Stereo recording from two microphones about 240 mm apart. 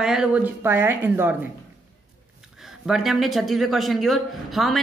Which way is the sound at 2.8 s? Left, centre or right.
Centre.